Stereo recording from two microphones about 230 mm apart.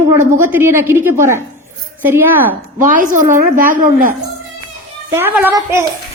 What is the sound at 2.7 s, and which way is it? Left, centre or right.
A woman's voice, right.